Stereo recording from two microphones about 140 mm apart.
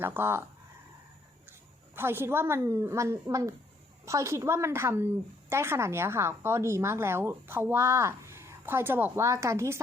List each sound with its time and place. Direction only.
0.0 s speech: 15° right (ahead or behind)
2.0 s a woman's voice: 15° right (ahead or behind)